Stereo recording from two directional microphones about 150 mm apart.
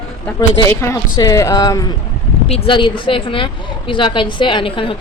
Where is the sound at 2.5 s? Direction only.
35° left (ahead or behind).